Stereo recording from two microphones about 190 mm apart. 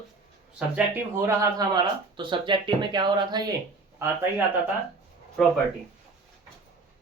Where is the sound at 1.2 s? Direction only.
20° right (ahead or behind).